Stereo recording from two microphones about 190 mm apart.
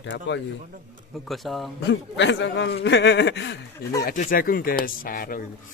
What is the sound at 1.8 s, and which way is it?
A man's voice, 70° left (ahead or behind).